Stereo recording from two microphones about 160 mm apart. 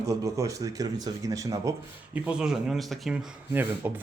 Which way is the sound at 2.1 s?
5° right (ahead or behind).